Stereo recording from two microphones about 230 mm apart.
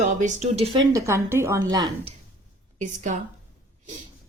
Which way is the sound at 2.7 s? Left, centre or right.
Right.